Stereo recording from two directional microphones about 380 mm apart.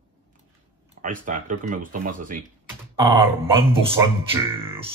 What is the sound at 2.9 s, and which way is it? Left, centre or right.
Speech, centre.